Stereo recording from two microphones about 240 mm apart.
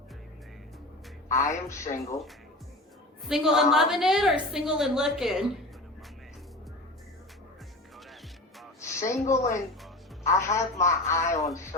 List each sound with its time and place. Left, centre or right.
1.3 s speech: centre
3.2 s a woman's voice: centre
8.8 s a sound: centre
9.2 s speech: left
10.2 s speech: centre